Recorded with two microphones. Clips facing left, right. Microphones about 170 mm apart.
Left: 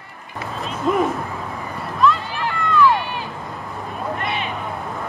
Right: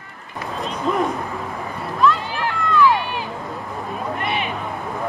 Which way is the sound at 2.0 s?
Centre (ahead or behind).